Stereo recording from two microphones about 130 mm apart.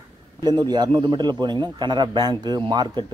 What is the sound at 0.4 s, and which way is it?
A man's voice, 35° right (ahead or behind).